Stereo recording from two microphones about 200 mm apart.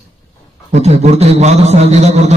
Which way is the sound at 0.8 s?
35° right (ahead or behind).